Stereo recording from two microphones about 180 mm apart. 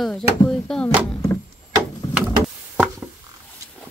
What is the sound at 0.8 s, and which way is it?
Speech, 20° left (ahead or behind).